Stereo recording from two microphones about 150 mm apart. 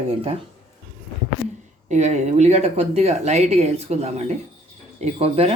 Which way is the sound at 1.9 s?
50° right (ahead or behind).